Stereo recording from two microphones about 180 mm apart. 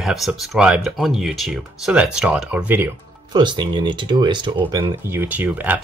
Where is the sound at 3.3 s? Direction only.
25° right (ahead or behind).